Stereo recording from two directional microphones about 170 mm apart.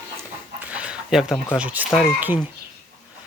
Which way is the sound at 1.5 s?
10° right (ahead or behind).